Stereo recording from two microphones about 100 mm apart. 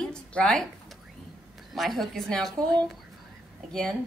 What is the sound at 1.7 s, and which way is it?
A woman's voice, centre (ahead or behind).